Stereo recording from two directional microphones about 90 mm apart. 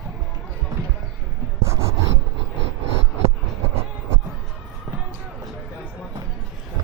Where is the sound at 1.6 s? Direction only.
30° right (ahead or behind).